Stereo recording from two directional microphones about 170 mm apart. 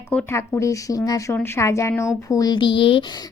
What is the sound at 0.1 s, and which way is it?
Speech, 10° left (ahead or behind).